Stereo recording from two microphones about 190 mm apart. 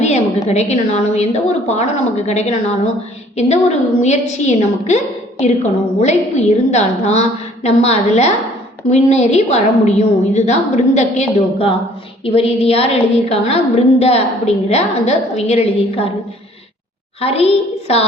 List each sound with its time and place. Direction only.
0.0 s a woman's voice: 35° left (ahead or behind)
6.0 s a woman's voice: 35° left (ahead or behind)
17.2 s a woman's voice: 30° left (ahead or behind)